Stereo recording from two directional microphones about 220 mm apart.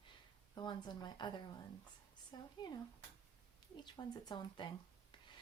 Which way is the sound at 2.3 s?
20° left (ahead or behind).